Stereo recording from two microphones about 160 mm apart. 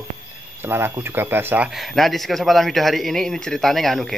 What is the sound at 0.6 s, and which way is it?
Speech, 15° right (ahead or behind).